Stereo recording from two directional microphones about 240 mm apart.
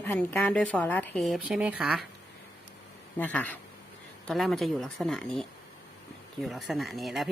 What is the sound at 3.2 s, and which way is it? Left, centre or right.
A woman's voice, centre.